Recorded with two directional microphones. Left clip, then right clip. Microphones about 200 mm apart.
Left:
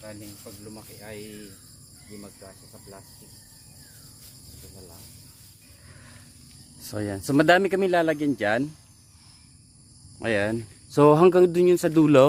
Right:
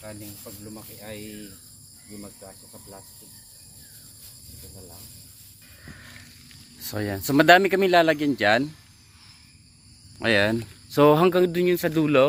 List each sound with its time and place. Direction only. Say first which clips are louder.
0.0 s speech: right 1 dB; 10° right (ahead or behind)
6.7 s speech: right 2 dB; 15° left (ahead or behind)
10.2 s speech: right 4 dB; centre (ahead or behind)
10.8 s speech: left 1 dB; 25° left (ahead or behind); by 12.2 s 45° left (ahead or behind)